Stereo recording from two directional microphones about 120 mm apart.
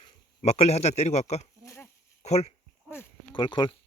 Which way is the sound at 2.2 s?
60° left (ahead or behind).